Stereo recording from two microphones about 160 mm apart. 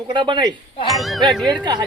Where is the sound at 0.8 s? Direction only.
Centre (ahead or behind).